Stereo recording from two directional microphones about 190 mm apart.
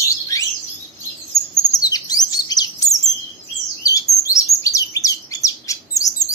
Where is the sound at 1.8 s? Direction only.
20° left (ahead or behind).